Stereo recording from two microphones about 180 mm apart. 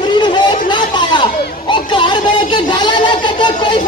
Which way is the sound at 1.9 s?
25° left (ahead or behind).